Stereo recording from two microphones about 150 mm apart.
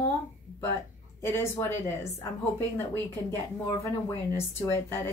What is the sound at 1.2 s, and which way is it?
Speech, 15° left (ahead or behind).